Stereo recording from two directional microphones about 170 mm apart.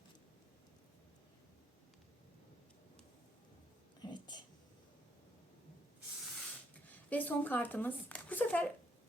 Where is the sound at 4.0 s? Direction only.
25° left (ahead or behind).